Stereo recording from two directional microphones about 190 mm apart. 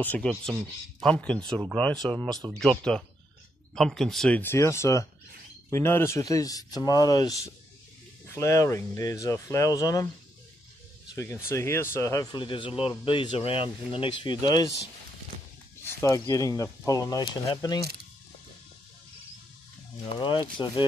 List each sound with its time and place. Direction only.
0.0 s speech: 5° left (ahead or behind)
11.4 s speech: 15° left (ahead or behind)
15.8 s speech: 15° left (ahead or behind)
20.2 s speech: 25° left (ahead or behind)